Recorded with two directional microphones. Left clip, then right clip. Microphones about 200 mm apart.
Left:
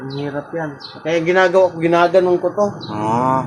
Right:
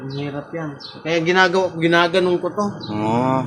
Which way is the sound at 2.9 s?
30° right (ahead or behind).